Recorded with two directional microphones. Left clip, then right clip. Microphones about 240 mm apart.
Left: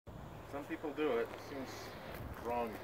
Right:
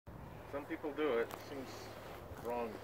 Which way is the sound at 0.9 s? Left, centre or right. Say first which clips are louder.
Even; left.